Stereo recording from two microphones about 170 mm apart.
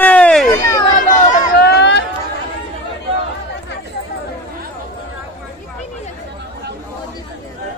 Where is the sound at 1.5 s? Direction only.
75° left (ahead or behind).